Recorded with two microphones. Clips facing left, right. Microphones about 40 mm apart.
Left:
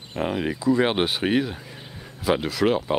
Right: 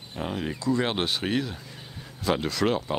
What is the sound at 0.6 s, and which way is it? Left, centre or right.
Speech, centre.